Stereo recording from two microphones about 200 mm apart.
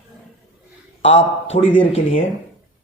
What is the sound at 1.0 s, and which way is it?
Speech, 70° left (ahead or behind).